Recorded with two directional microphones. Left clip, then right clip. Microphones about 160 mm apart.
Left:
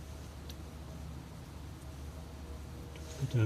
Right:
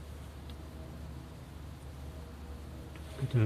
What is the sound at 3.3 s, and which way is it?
Speech, 55° right (ahead or behind).